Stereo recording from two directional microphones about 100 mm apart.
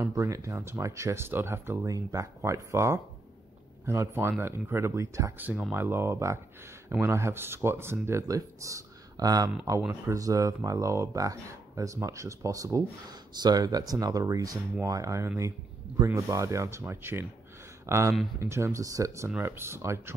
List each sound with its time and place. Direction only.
0.0 s speech: 30° right (ahead or behind)
1.9 s speech: 35° right (ahead or behind)